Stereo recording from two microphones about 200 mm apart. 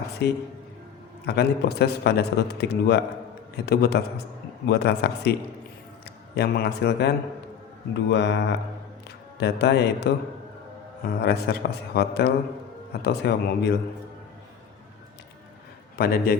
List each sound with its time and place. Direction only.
0.2 s a man's voice: 55° left (ahead or behind)
6.3 s a man's voice: 55° left (ahead or behind)
8.1 s a man's voice: 60° left (ahead or behind)
16.0 s a man's voice: 50° left (ahead or behind)